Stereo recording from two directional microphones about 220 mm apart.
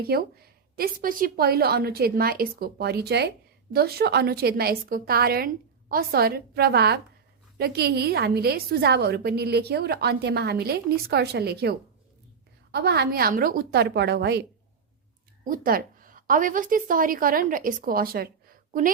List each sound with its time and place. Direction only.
0.0 s a woman's voice: 45° right (ahead or behind)
12.7 s a woman's voice: 45° right (ahead or behind)
15.4 s a woman's voice: 40° right (ahead or behind)